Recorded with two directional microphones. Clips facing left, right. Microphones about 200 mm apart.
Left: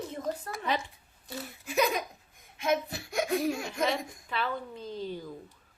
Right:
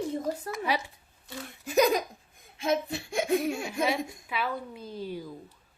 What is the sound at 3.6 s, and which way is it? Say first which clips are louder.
A woman's voice: right 2 dB; 10° right (ahead or behind).